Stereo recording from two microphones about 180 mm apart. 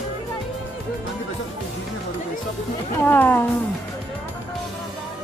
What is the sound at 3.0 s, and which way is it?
Speech, 10° left (ahead or behind).